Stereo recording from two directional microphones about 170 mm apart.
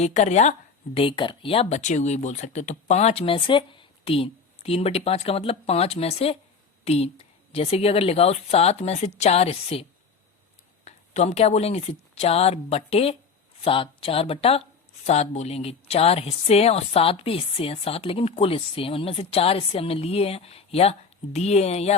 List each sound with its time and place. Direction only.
0.0 s speech: 40° left (ahead or behind)
0.9 s speech: 30° left (ahead or behind)
10.8 s a woman's voice: 40° left (ahead or behind)